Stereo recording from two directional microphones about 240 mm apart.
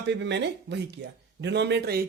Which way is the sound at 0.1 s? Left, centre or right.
Right.